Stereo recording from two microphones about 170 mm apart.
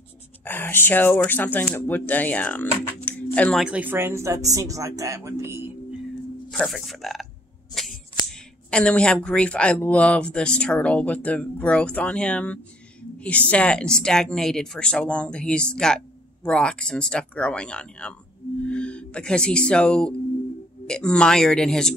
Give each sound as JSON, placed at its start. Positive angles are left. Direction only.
{"t": 0.5, "sound": "speech", "side_deg": 10}
{"t": 3.6, "sound": "speech", "side_deg": -10}
{"t": 6.5, "sound": "speech", "side_deg": 0}